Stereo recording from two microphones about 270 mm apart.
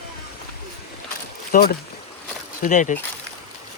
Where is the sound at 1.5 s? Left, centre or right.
Left.